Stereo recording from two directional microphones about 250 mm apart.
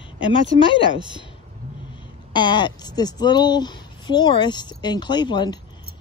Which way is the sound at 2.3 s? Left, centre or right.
Centre.